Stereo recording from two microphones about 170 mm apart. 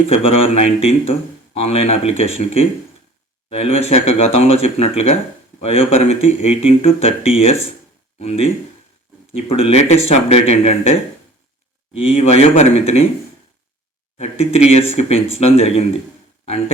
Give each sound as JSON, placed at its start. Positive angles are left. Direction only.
{"t": 0.1, "sound": "speech", "side_deg": 35}
{"t": 11.9, "sound": "speech", "side_deg": 40}
{"t": 14.2, "sound": "speech", "side_deg": 40}